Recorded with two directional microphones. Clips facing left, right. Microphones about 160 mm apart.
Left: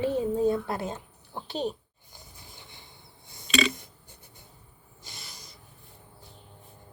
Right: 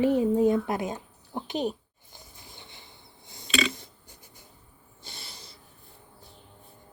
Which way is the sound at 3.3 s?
25° right (ahead or behind).